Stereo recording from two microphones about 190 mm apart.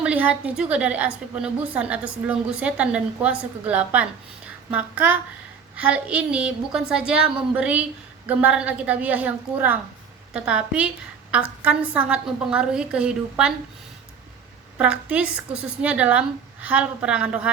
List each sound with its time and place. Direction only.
0.0 s a woman's voice: 5° right (ahead or behind)
14.8 s a woman's voice: 5° right (ahead or behind)